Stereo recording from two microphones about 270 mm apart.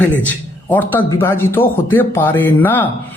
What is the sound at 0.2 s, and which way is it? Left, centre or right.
Speech, centre.